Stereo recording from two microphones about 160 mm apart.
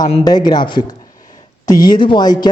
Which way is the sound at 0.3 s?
25° left (ahead or behind).